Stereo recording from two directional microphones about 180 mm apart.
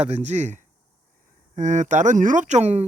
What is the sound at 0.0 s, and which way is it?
Speech, 40° right (ahead or behind).